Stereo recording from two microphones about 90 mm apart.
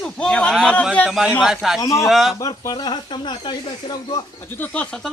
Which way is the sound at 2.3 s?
40° left (ahead or behind).